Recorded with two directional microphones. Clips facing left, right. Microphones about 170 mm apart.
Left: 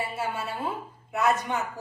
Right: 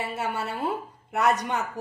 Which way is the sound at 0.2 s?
65° right (ahead or behind).